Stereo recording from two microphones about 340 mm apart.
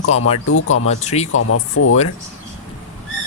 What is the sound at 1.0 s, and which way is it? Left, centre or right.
Speech, centre.